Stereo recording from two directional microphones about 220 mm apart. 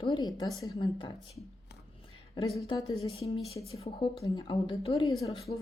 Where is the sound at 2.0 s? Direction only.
25° left (ahead or behind).